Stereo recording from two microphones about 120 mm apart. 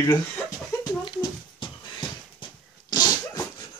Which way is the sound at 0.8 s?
35° left (ahead or behind).